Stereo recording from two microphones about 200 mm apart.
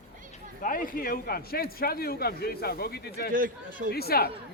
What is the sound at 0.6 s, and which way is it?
A man's voice, 45° left (ahead or behind).